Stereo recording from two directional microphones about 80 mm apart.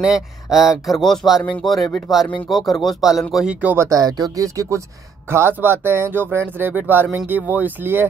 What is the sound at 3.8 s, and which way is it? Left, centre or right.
Speech, right.